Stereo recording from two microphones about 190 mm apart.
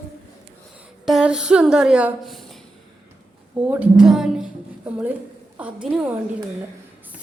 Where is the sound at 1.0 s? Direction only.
5° right (ahead or behind).